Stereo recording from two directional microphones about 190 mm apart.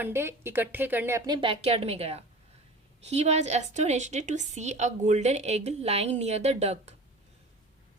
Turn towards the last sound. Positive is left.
turn(degrees=-35)  # may be behind; listen again after turning